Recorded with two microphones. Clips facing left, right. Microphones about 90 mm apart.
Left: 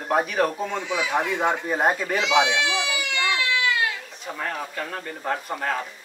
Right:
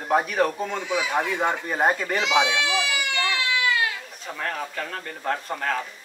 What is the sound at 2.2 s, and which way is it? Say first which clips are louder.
Speech: left 2 dB; 20° left (ahead or behind).